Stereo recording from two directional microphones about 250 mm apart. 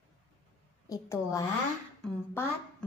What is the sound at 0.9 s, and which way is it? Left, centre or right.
A woman's voice, centre.